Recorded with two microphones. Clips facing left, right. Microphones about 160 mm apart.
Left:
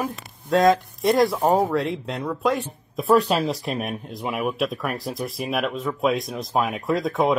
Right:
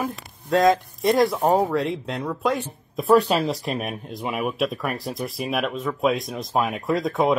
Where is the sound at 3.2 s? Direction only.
45° right (ahead or behind).